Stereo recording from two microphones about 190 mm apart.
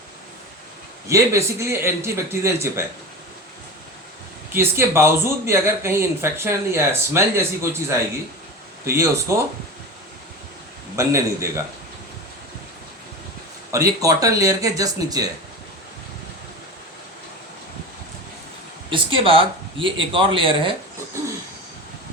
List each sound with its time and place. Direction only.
1.0 s speech: 15° right (ahead or behind)
4.5 s speech: 15° right (ahead or behind)
10.9 s speech: 15° right (ahead or behind)
13.7 s speech: 15° right (ahead or behind)
18.9 s speech: 30° right (ahead or behind)